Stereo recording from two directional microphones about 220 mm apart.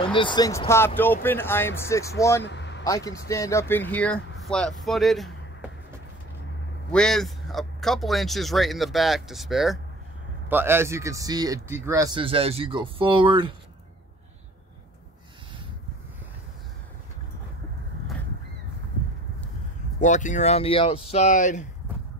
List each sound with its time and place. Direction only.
0.0 s speech: 20° left (ahead or behind)
2.4 s vehicle: 50° left (ahead or behind)
3.3 s speech: 15° left (ahead or behind)
6.9 s speech: 5° left (ahead or behind); by 13.5 s 20° right (ahead or behind)
20.0 s speech: 35° left (ahead or behind)